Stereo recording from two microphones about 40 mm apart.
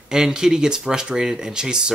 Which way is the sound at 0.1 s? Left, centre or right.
Centre.